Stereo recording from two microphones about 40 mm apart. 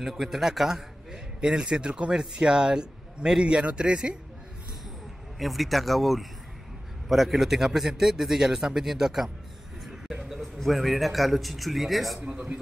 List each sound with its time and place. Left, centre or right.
0.0 s a man's voice: centre; by 4.2 s right
5.4 s a man's voice: centre